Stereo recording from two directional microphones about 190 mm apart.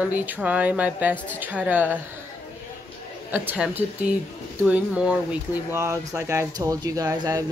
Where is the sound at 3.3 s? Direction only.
10° right (ahead or behind).